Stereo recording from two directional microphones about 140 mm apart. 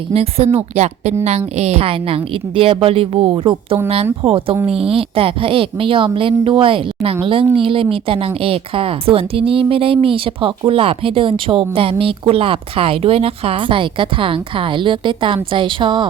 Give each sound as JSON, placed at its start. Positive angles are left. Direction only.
{"t": 0.1, "sound": "a woman's voice", "side_deg": -45}